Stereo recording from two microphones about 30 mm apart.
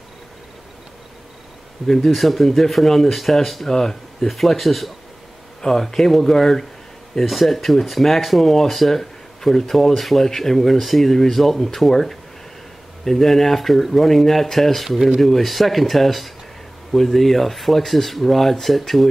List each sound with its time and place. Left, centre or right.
2.0 s speech: centre
3.6 s speech: centre
5.6 s speech: centre
7.2 s speech: centre
14.9 s speech: centre
15.1 s speech: centre